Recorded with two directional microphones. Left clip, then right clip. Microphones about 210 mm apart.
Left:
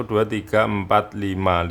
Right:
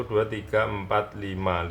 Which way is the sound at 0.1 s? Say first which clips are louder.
Left 5 dB; 60° left (ahead or behind).